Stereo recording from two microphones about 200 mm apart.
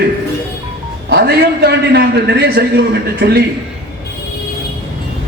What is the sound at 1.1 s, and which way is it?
A man's voice, 55° right (ahead or behind).